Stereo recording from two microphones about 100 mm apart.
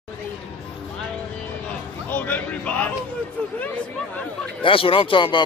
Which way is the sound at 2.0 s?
20° left (ahead or behind).